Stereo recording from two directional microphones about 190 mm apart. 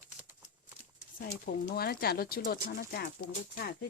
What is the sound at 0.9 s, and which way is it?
Speech, 55° left (ahead or behind).